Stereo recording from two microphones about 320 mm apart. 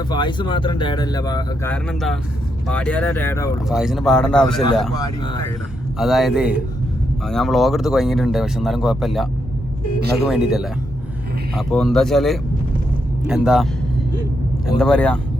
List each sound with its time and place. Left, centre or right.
0.1 s speech: centre
4.9 s speech: centre
6.0 s speech: centre
10.2 s speech: centre
14.8 s speech: centre